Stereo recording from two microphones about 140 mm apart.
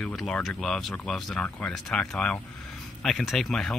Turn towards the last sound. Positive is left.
turn(degrees=5)  # may be behind; listen again after turning